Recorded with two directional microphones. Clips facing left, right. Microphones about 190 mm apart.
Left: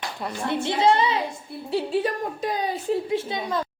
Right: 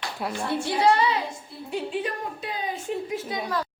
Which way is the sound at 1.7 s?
35° left (ahead or behind).